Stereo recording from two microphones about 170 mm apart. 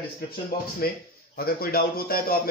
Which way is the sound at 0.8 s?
60° left (ahead or behind).